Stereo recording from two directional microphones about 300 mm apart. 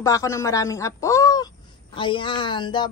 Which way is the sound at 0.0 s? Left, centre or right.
Centre.